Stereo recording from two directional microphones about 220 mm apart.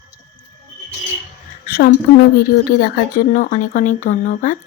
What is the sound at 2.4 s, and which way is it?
Speech, 45° left (ahead or behind).